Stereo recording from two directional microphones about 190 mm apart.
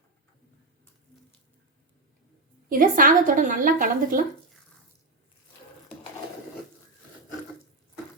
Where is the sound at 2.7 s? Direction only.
45° right (ahead or behind).